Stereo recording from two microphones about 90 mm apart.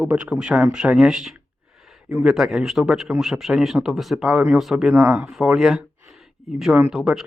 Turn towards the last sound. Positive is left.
turn(degrees=-5)  # may be behind; listen again after turning